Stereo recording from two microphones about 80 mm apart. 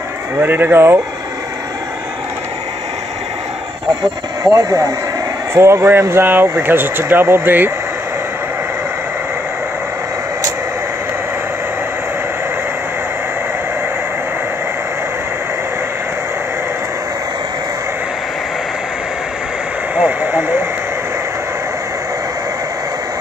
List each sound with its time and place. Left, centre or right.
0.4 s speech: right
4.4 s speech: right
20.0 s vehicle: right